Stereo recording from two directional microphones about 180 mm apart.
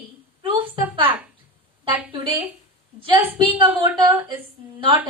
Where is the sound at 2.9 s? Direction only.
30° right (ahead or behind).